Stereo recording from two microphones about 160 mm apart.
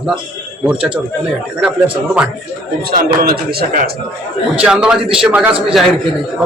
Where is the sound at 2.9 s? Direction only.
70° right (ahead or behind).